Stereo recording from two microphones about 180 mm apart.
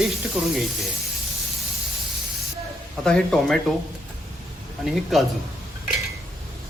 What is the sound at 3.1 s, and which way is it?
Speech, 5° left (ahead or behind).